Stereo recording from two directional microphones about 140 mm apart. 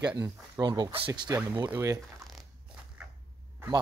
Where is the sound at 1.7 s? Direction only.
20° right (ahead or behind).